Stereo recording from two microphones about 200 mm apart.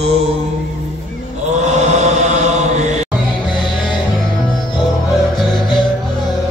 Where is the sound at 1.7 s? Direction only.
35° right (ahead or behind).